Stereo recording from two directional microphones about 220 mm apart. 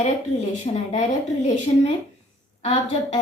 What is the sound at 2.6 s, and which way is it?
Speech, 25° left (ahead or behind).